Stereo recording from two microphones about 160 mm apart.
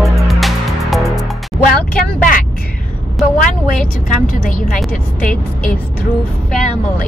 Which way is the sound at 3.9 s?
55° left (ahead or behind).